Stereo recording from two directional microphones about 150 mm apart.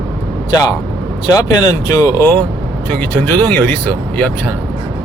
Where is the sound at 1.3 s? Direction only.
25° left (ahead or behind).